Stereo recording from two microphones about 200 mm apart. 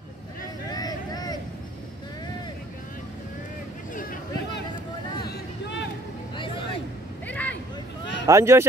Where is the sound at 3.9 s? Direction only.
45° left (ahead or behind).